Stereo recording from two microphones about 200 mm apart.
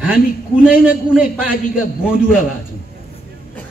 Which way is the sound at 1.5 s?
45° left (ahead or behind).